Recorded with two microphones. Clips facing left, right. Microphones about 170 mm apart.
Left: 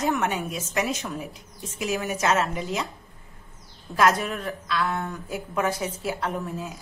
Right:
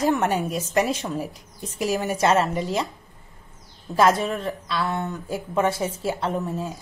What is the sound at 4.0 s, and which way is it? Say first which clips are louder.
Speech: right 3 dB; 30° right (ahead or behind).